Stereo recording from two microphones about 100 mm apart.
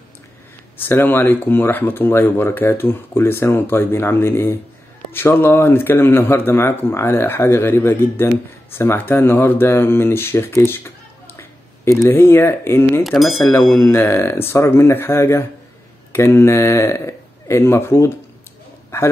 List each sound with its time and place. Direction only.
0.7 s speech: 20° left (ahead or behind)
13.0 s speech: centre (ahead or behind)
13.5 s speech: 30° left (ahead or behind)